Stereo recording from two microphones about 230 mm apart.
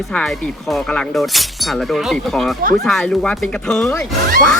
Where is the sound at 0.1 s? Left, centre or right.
Centre.